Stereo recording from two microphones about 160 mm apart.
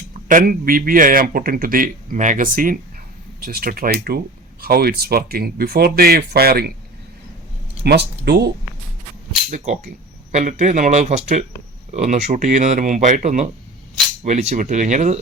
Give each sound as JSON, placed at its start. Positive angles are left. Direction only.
{"t": 0.1, "sound": "speech", "side_deg": -55}
{"t": 7.9, "sound": "speech", "side_deg": -90}
{"t": 9.5, "sound": "speech", "side_deg": -55}